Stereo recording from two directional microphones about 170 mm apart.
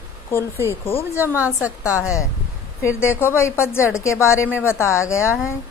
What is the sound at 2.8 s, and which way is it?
A woman's voice, 15° left (ahead or behind).